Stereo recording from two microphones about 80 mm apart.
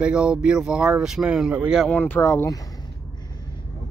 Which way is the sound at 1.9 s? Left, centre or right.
Left.